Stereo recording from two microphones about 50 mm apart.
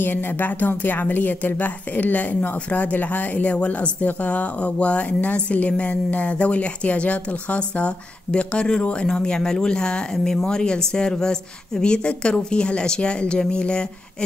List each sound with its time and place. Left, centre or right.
0.0 s speech: left; by 13.8 s centre